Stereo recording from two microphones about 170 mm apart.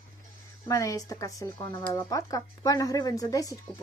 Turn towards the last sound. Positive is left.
turn(degrees=20)  # may be behind; listen again after turning